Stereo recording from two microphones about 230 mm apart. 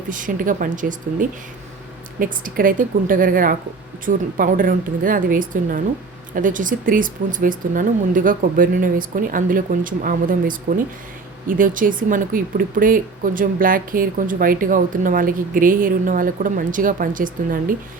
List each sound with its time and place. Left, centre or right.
0.1 s speech: right